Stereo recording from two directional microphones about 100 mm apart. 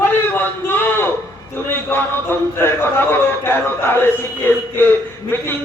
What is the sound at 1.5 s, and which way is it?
A man's voice, 20° left (ahead or behind).